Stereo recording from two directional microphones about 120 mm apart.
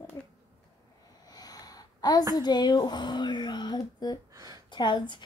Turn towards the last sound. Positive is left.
turn(degrees=40)  # may be behind; listen again after turning